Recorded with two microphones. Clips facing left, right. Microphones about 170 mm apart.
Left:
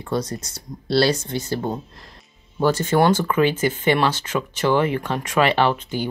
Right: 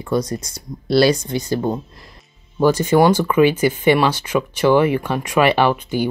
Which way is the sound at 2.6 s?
15° right (ahead or behind).